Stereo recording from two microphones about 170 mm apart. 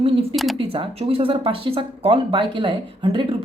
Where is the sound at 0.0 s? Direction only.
35° right (ahead or behind).